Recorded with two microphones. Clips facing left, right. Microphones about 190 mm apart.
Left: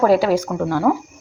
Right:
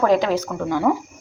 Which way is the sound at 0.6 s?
5° left (ahead or behind).